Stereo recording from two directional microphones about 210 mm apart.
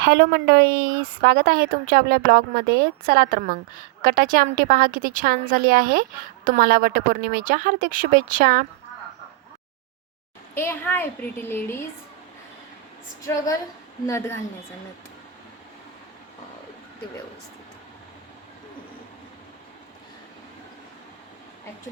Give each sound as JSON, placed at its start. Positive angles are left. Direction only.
{"t": 0.1, "sound": "a woman's voice", "side_deg": -50}
{"t": 10.5, "sound": "a woman's voice", "side_deg": 10}
{"t": 13.2, "sound": "a woman's voice", "side_deg": 15}